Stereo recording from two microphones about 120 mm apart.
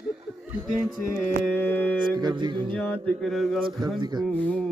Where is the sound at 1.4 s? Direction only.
15° left (ahead or behind).